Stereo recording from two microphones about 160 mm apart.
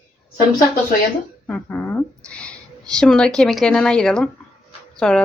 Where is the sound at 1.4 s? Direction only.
10° left (ahead or behind).